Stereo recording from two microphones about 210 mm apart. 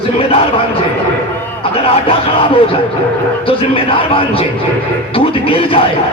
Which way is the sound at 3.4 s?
25° left (ahead or behind).